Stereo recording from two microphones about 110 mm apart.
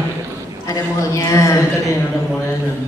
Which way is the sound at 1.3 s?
25° left (ahead or behind).